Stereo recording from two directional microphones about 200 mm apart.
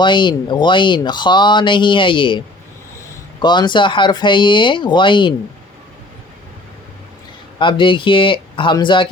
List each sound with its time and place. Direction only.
0.0 s speech: 25° left (ahead or behind)
3.4 s speech: 20° left (ahead or behind)
7.6 s speech: 25° left (ahead or behind)